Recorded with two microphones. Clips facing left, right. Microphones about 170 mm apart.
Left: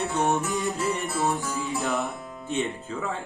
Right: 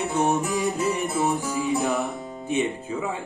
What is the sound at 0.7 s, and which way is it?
Speech, 20° right (ahead or behind).